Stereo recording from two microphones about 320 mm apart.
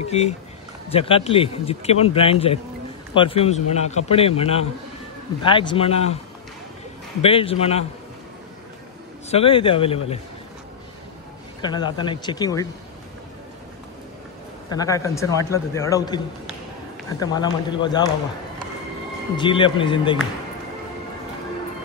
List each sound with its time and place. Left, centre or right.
0.0 s a man's voice: centre
7.2 s a man's voice: centre
9.3 s speech: centre
11.6 s speech: centre
14.7 s speech: centre
19.3 s speech: centre